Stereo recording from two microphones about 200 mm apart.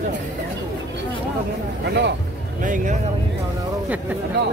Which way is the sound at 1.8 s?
55° right (ahead or behind).